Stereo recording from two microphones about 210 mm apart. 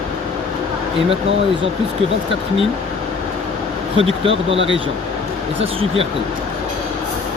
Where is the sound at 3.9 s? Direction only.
25° right (ahead or behind).